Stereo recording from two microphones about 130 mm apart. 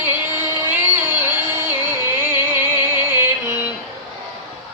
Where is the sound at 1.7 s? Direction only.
15° right (ahead or behind).